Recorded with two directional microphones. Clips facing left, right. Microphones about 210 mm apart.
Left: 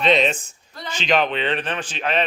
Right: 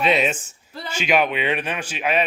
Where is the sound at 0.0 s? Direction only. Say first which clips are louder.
Left 2 dB; 10° right (ahead or behind).